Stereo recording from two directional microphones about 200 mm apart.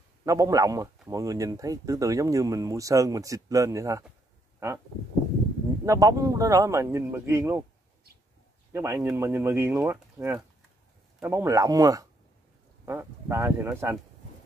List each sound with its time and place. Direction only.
0.2 s speech: 15° right (ahead or behind)
5.9 s speech: 15° right (ahead or behind)
8.7 s speech: 10° right (ahead or behind)